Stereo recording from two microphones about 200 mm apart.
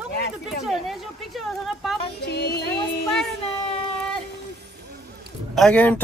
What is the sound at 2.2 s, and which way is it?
Music, 55° left (ahead or behind).